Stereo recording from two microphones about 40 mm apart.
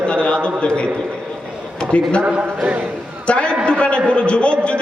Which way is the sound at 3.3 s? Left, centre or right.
Left.